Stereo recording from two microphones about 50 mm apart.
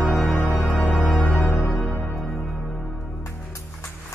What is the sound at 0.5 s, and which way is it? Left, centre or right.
Music, centre.